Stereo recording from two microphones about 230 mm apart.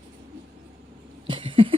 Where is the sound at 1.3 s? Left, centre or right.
Right.